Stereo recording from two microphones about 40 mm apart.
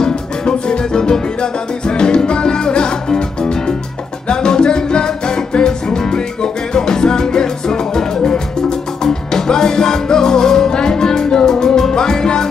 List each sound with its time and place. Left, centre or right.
0.0 s music: left